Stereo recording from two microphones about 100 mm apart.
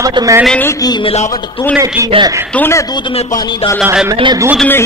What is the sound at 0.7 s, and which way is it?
Speech, 40° left (ahead or behind).